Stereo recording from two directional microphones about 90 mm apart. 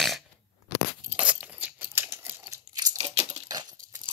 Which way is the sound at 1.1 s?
15° right (ahead or behind).